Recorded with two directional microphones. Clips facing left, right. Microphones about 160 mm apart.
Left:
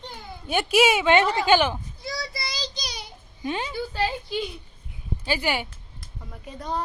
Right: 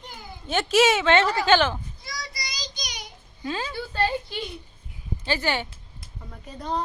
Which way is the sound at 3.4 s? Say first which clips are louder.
Left 2 dB; 20° left (ahead or behind).